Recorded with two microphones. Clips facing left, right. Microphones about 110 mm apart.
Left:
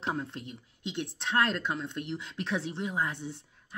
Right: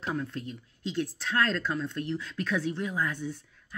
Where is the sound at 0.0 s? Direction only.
25° left (ahead or behind).